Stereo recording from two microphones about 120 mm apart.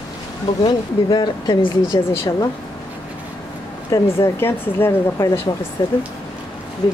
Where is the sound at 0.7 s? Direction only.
40° left (ahead or behind).